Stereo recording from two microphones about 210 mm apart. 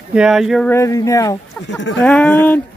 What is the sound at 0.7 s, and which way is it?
Speech, 15° left (ahead or behind).